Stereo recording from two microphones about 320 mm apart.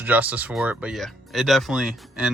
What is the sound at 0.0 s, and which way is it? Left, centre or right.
Speech, centre.